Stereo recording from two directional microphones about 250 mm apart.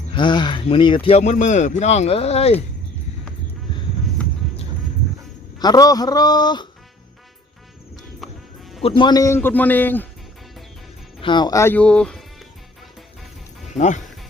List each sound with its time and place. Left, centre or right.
0.1 s a man's voice: centre
5.5 s a man's voice: centre
8.2 s music: centre
8.8 s a man's voice: centre
11.2 s speech: centre
13.7 s a man's voice: left